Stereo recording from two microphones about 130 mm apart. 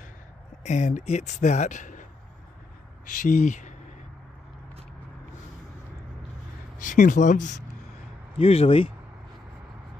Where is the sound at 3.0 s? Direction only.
85° left.